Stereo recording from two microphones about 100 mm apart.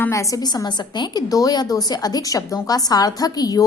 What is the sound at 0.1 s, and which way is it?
A woman's voice, 35° left (ahead or behind).